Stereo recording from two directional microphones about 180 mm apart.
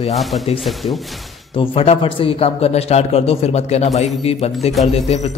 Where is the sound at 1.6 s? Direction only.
30° left (ahead or behind).